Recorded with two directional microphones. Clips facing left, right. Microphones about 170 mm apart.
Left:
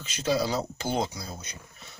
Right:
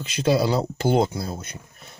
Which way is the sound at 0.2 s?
65° right (ahead or behind).